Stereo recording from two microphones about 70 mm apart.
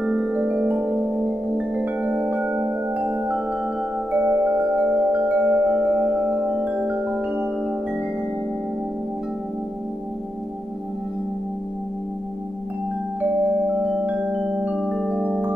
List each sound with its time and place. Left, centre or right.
0.0 s music: centre
14.0 s music: centre
14.8 s music: centre